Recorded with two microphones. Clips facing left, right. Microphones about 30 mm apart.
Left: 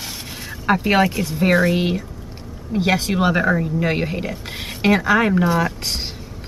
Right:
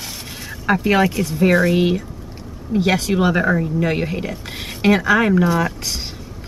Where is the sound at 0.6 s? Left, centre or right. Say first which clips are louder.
Even; centre.